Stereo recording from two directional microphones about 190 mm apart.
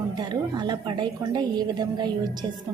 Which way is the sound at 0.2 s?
20° right (ahead or behind).